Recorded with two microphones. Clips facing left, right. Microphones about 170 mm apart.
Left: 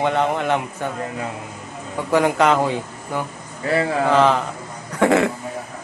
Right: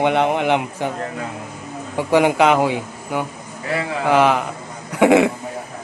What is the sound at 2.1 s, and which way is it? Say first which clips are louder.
A man's voice: right 2 dB; 15° right (ahead or behind).